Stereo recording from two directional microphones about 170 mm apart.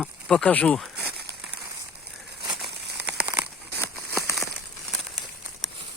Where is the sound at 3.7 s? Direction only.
15° left (ahead or behind).